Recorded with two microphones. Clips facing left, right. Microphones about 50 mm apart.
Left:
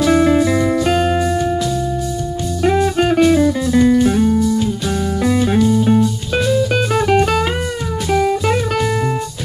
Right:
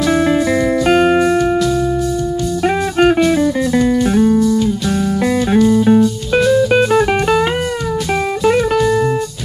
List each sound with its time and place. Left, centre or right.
0.0 s music: centre
0.3 s music: centre
2.6 s music: right
3.8 s music: centre
6.3 s music: centre
8.7 s music: centre